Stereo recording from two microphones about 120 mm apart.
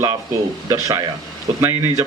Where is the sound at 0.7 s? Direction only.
30° right (ahead or behind).